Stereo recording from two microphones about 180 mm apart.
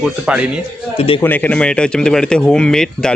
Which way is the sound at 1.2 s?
10° left (ahead or behind).